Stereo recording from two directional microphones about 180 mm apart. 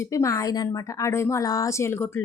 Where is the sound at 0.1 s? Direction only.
15° left (ahead or behind).